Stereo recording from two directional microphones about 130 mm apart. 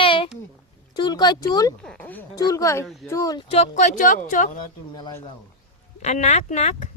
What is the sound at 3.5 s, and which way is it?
Speech, 65° left (ahead or behind).